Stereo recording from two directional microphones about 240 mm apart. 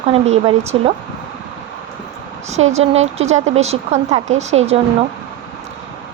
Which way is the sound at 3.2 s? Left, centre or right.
Right.